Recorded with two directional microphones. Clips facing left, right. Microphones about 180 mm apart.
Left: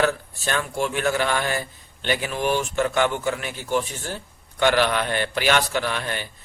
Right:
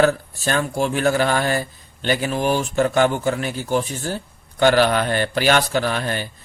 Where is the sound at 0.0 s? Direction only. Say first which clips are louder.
Right 5 dB; 40° right (ahead or behind).